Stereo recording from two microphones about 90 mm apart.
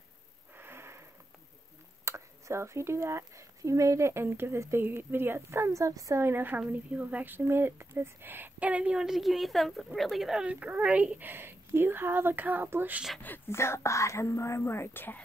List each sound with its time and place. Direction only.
0.6 s wheeze: 25° right (ahead or behind)
2.0 s speech: 35° right (ahead or behind)
6.2 s a woman's voice: 25° right (ahead or behind)
13.2 s speech: 25° left (ahead or behind)